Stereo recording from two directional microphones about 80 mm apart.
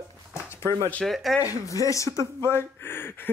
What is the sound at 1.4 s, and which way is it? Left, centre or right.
Speech, left.